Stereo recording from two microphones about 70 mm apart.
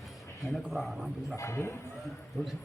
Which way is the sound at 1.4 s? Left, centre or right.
Left.